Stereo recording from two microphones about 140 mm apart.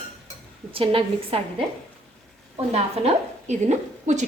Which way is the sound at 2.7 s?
50° right (ahead or behind).